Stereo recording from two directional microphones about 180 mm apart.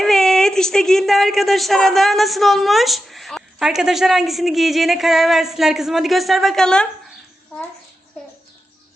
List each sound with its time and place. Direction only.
0.0 s speech: centre (ahead or behind)